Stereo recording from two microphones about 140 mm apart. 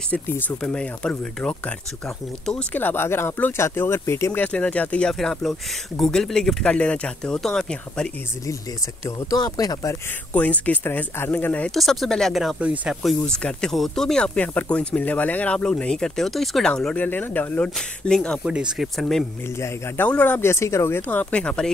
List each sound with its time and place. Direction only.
0.1 s speech: 10° left (ahead or behind)
2.7 s speech: 15° left (ahead or behind)
9.0 s speech: 25° left (ahead or behind)
10.3 s speech: 10° left (ahead or behind); by 13.1 s 5° right (ahead or behind)
13.3 s speech: 5° left (ahead or behind)
18.4 s speech: 5° right (ahead or behind)
19.6 s speech: 10° left (ahead or behind)